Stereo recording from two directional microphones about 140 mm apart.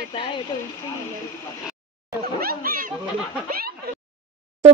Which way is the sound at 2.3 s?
90° right.